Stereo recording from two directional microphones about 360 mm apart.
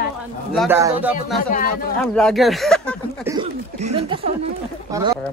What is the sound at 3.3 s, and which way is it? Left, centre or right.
Speech, centre.